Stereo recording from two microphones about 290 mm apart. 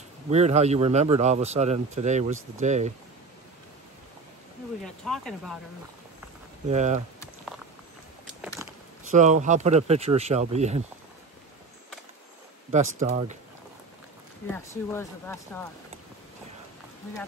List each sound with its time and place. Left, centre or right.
0.3 s a man's voice: right
5.0 s speech: centre
6.7 s a man's voice: right
8.6 s a sound: centre
9.1 s a man's voice: right
12.7 s a man's voice: right
14.5 s speech: centre